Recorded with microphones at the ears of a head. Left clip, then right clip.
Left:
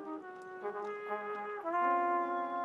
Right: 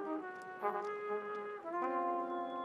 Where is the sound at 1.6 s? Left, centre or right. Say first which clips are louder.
Left 6 dB; left.